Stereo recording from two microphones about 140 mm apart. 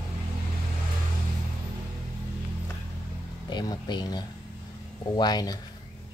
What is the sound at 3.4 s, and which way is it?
Music, 30° left (ahead or behind).